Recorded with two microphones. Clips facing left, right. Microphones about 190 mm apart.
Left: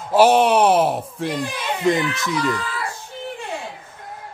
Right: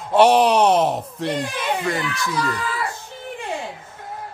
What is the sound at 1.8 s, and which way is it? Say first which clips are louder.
Speech: left 5 dB; 20° left (ahead or behind).